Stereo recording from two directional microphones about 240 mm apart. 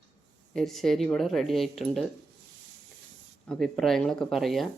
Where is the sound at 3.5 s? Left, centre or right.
Centre.